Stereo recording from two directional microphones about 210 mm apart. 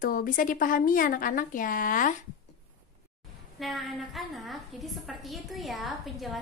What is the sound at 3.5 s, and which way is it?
A woman's voice, centre (ahead or behind).